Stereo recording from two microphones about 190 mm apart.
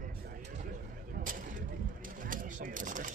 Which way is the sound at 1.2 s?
45° right (ahead or behind).